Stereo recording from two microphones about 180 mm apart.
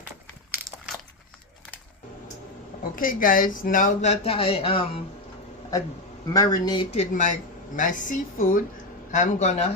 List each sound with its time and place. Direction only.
2.9 s speech: 50° left (ahead or behind); by 5.0 s 30° left (ahead or behind)
6.3 s speech: 20° left (ahead or behind)
6.9 s a woman's voice: 40° left (ahead or behind)